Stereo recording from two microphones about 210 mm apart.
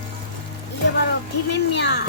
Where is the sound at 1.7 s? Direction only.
55° left (ahead or behind).